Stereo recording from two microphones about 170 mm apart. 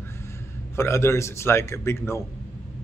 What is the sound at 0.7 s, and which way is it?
Speech, 15° left (ahead or behind).